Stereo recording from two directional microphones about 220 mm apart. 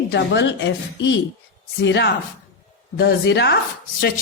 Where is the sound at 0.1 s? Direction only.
50° left (ahead or behind).